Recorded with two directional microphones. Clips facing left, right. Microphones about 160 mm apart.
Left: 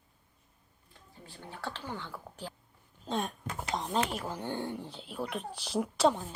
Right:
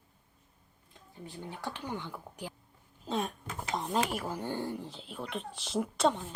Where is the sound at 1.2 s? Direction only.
15° right (ahead or behind).